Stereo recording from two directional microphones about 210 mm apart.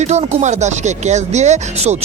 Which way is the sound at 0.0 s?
30° right (ahead or behind).